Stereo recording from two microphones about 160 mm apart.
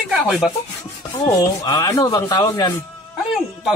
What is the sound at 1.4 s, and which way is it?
Speech, 25° left (ahead or behind).